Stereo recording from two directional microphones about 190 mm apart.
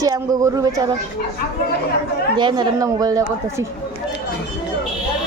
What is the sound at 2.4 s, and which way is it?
A woman's voice, 25° right (ahead or behind).